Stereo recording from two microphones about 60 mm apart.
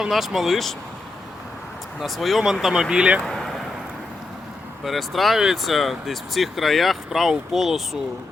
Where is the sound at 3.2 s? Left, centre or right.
Centre.